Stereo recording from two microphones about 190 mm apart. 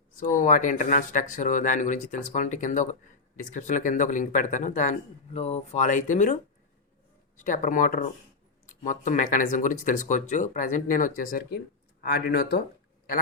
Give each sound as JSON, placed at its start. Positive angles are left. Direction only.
{"t": 0.2, "sound": "speech", "side_deg": 40}
{"t": 7.4, "sound": "speech", "side_deg": 45}